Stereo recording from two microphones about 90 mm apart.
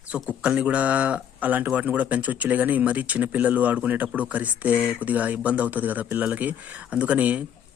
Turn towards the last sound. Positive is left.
turn(degrees=-15)  # may be behind; listen again after turning